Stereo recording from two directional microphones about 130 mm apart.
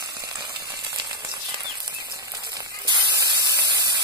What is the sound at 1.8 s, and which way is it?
Spray, 35° right (ahead or behind).